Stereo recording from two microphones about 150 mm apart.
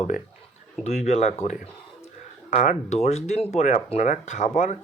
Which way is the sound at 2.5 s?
50° left (ahead or behind).